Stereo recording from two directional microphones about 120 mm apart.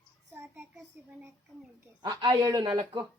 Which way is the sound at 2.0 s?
40° right (ahead or behind).